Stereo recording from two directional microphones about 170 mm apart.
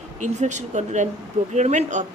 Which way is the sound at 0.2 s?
45° right (ahead or behind).